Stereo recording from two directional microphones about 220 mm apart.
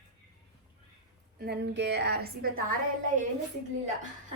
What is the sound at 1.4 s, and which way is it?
A woman's voice, 50° right (ahead or behind).